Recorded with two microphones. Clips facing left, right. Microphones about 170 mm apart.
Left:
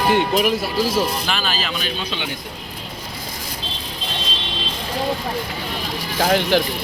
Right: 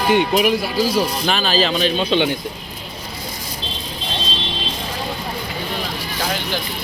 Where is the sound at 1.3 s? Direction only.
35° right (ahead or behind).